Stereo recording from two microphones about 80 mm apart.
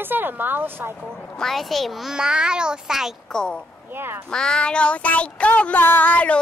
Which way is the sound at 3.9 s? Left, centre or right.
Right.